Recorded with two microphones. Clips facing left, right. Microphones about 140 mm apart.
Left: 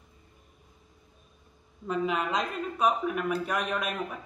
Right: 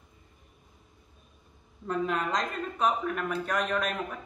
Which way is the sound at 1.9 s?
5° left (ahead or behind).